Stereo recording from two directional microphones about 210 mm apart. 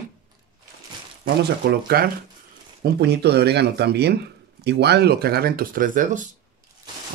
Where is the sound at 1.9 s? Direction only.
45° right (ahead or behind).